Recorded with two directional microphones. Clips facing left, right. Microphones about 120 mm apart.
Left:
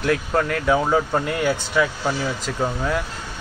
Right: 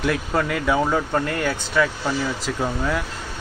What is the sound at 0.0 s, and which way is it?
Speech, centre (ahead or behind).